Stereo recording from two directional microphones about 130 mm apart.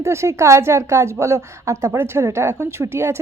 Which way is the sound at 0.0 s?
20° right (ahead or behind).